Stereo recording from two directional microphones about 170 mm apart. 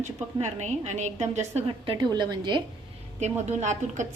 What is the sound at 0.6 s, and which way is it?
A woman's voice, 40° right (ahead or behind).